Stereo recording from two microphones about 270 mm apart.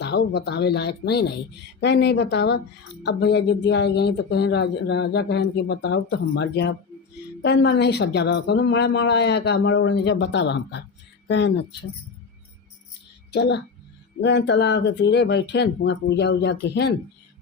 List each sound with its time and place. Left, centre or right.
0.0 s speech: left
13.3 s speech: left